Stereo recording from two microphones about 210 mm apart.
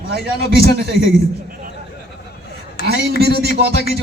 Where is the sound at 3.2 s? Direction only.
50° right (ahead or behind).